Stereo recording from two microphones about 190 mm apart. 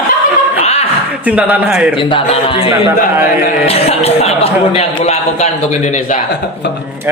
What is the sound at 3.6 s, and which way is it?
A man's voice, 30° left (ahead or behind).